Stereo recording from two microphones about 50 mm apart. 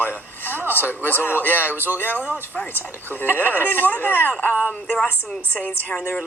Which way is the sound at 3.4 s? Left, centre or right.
Right.